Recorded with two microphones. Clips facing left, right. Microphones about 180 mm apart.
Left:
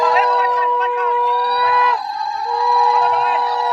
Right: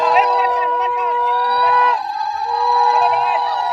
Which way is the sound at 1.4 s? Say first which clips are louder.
Right 1 dB; 5° left (ahead or behind).